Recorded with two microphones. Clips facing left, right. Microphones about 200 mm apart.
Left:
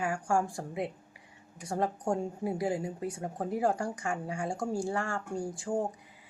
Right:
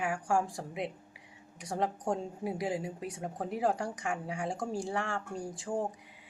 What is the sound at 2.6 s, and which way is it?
A woman's voice, 20° right (ahead or behind).